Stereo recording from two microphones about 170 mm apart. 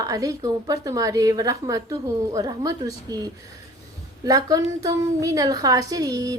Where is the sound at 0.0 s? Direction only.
20° right (ahead or behind).